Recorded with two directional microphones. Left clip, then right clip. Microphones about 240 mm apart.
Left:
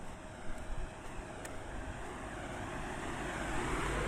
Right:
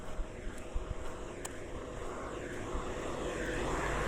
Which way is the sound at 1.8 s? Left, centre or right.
Left.